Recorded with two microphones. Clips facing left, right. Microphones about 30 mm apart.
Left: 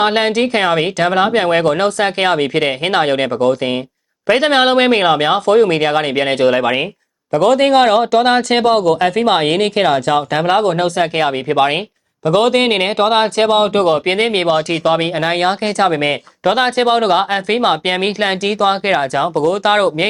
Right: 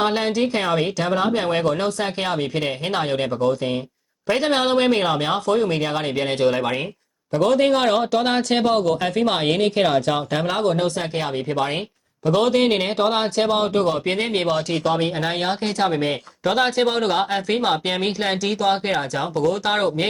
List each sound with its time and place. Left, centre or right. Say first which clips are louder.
0.0 s speech: left 6 dB; left
7.3 s speech: left 6 dB; left
7.8 s speech: left 8 dB; left
9.8 s speech: left 6 dB; left
10.3 s speech: left 6 dB; left
12.2 s speech: left 5 dB; left
13.4 s speech: left 4 dB; left
16.0 s speech: left 6 dB; left
16.5 s speech: left 6 dB; left
17.8 s speech: left 6 dB; left